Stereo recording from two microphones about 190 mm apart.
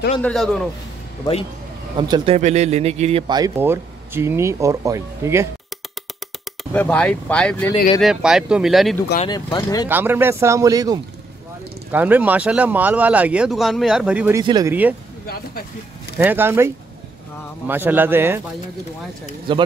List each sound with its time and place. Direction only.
0.2 s speech: centre (ahead or behind)
2.0 s speech: 25° right (ahead or behind)
2.3 s speech: 35° right (ahead or behind); by 5.5 s 15° right (ahead or behind)
6.7 s speech: 5° left (ahead or behind)
8.0 s speech: 5° right (ahead or behind)
9.3 s speech: 20° left (ahead or behind)
9.8 s speech: 10° right (ahead or behind)
11.9 s speech: 10° right (ahead or behind)
14.4 s speech: 20° right (ahead or behind)
14.7 s speech: 10° right (ahead or behind)
16.2 s speech: 10° right (ahead or behind)
19.5 s speech: 25° right (ahead or behind)